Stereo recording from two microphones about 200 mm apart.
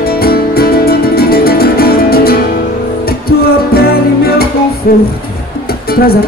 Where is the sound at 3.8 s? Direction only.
50° left (ahead or behind).